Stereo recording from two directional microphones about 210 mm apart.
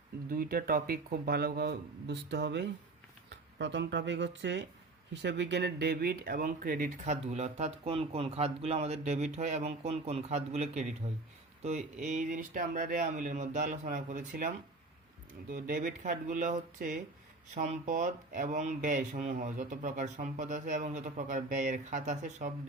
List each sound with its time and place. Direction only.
0.3 s speech: 45° right (ahead or behind)